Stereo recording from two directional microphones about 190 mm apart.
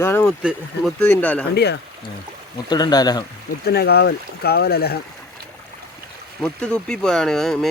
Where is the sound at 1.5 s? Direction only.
60° left (ahead or behind).